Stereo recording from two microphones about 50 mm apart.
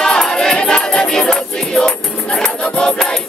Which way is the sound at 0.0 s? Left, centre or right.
Centre.